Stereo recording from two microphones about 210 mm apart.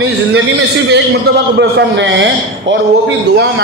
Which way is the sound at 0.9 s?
55° right (ahead or behind).